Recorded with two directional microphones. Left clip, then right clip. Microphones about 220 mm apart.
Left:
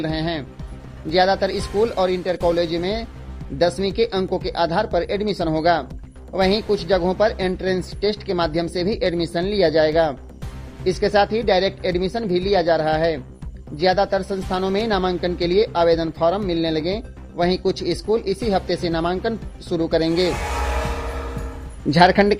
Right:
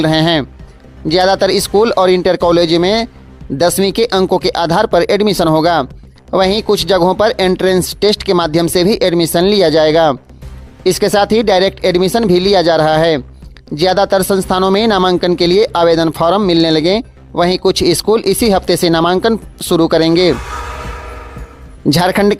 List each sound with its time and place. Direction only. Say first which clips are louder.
0.0 s speech: right 13 dB; 35° right (ahead or behind)
21.9 s a woman's voice: right 2 dB; 30° right (ahead or behind)